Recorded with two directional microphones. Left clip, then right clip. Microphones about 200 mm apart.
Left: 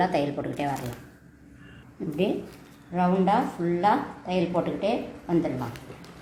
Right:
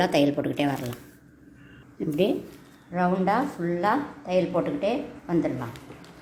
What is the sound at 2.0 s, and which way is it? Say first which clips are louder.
Speech: right 4 dB; 45° right (ahead or behind).